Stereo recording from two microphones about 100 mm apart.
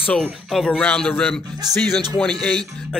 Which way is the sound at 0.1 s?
5° left (ahead or behind).